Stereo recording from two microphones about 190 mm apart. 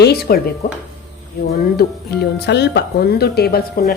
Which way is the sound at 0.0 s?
55° left (ahead or behind).